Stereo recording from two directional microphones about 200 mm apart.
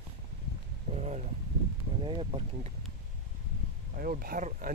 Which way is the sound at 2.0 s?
25° right (ahead or behind).